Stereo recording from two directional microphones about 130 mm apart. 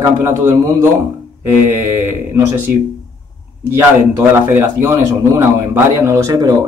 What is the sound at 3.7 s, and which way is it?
A man's voice, 15° right (ahead or behind).